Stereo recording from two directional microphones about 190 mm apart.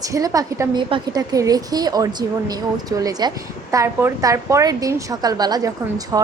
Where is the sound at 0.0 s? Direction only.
20° right (ahead or behind).